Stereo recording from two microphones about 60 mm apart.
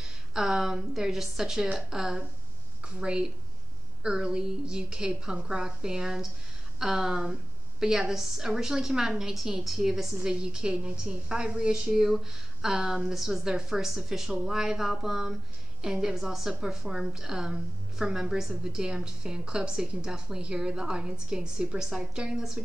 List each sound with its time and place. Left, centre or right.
0.0 s a woman's voice: centre